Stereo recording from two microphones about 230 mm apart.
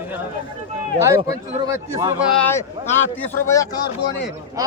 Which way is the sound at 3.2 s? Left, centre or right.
Centre.